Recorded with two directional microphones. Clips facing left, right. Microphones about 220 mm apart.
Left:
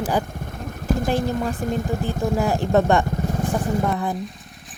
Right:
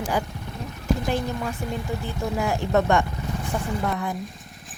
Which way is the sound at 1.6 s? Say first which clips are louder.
Left 6 dB; 45° left (ahead or behind).